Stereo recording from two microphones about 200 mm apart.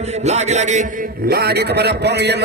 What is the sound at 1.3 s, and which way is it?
A man's voice, 50° right (ahead or behind).